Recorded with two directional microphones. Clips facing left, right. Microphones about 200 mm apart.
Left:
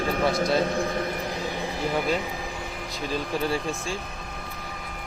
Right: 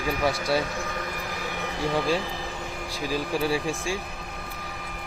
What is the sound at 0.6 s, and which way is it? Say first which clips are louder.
Vehicle: left 6 dB; 35° left (ahead or behind).